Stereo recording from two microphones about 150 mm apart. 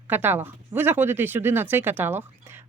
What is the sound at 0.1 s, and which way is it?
Speech, 15° right (ahead or behind).